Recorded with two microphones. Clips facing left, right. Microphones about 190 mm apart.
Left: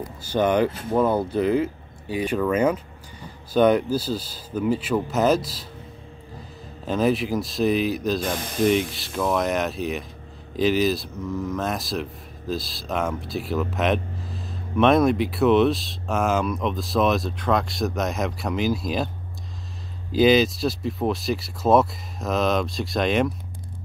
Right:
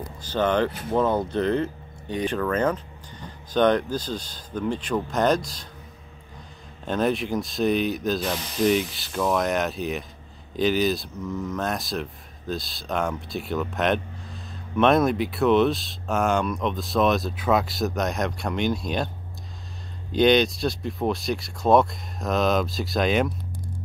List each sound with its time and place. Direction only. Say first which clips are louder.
0.2 s speech: left 2 dB; 10° left (ahead or behind)
6.8 s speech: left 2 dB; centre (ahead or behind)
8.4 s speech: left 2 dB; 50° left (ahead or behind)
8.6 s speech: left 1 dB; centre (ahead or behind)
20.1 s speech: left 1 dB; 5° left (ahead or behind)